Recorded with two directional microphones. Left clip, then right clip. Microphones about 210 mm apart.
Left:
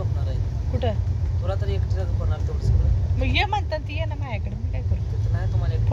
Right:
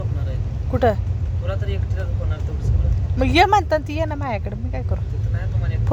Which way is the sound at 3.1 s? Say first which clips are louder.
Right 9 dB; 40° right (ahead or behind).